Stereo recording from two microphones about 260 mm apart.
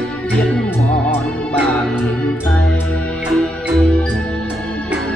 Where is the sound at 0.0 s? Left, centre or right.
Centre.